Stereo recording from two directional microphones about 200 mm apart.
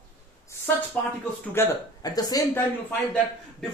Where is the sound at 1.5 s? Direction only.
15° left (ahead or behind).